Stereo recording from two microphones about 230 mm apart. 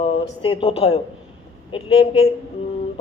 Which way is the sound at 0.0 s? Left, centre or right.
Left.